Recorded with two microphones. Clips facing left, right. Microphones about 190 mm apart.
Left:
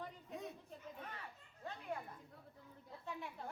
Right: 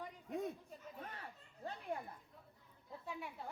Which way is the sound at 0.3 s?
50° right (ahead or behind).